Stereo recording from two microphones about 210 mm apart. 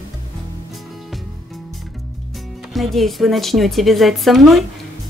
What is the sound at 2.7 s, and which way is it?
A woman's voice, centre (ahead or behind).